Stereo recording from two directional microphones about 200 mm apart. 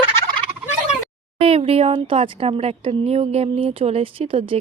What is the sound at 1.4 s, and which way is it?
Speech, 30° right (ahead or behind).